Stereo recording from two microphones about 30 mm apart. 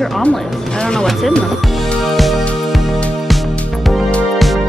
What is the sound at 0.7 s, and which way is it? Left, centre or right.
Speech, left.